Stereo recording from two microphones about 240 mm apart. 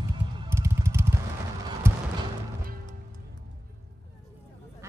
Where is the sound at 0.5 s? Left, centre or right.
Centre.